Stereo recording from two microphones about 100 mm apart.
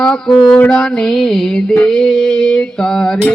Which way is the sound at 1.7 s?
5° left (ahead or behind).